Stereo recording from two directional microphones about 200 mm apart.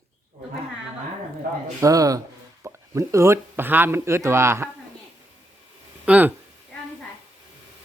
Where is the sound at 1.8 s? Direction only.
15° right (ahead or behind).